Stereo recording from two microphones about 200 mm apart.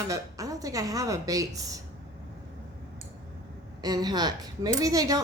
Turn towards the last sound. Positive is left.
turn(degrees=-20)  # may be behind; listen again after turning